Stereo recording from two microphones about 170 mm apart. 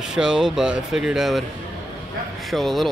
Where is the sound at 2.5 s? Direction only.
Centre (ahead or behind).